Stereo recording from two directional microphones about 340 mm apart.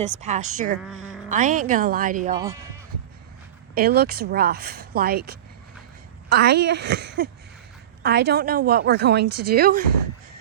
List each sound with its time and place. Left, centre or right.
0.0 s speech: centre
0.8 s speech: centre
1.3 s speech: right
2.3 s speech: centre
3.8 s speech: right
6.4 s speech: right